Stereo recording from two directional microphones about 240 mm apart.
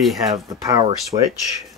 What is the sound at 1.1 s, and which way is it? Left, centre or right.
Speech, right.